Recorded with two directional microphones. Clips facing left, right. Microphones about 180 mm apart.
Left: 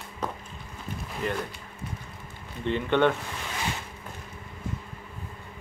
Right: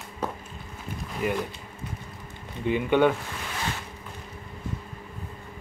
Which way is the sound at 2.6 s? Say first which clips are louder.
Right 2 dB; 10° right (ahead or behind).